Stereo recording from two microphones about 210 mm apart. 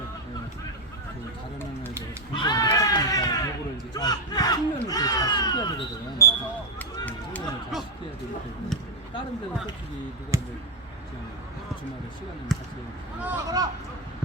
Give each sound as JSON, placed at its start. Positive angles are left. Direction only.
{"t": 2.3, "sound": "run", "side_deg": 20}
{"t": 3.9, "sound": "a sound", "side_deg": 20}
{"t": 10.3, "sound": "speech", "side_deg": -15}
{"t": 12.5, "sound": "speech", "side_deg": 0}
{"t": 13.2, "sound": "speech", "side_deg": -15}